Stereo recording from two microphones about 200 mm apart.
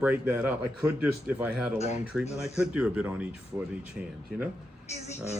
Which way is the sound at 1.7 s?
35° left (ahead or behind).